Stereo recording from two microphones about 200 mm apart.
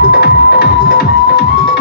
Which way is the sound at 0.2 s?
50° left (ahead or behind).